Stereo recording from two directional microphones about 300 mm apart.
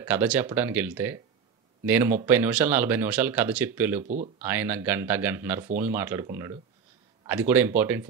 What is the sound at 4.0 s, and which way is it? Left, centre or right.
Speech, right.